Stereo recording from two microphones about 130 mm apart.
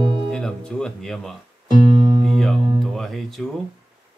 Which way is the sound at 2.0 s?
35° right (ahead or behind).